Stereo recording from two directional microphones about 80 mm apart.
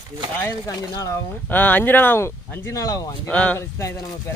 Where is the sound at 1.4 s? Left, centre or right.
Left.